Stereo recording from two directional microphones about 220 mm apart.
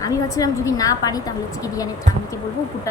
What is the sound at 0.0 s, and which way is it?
A woman's voice, 15° left (ahead or behind).